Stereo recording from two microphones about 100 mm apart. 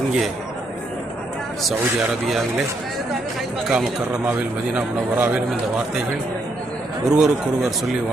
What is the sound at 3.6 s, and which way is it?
Speech, 5° right (ahead or behind).